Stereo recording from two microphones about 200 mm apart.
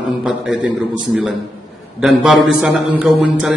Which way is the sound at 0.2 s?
5° right (ahead or behind).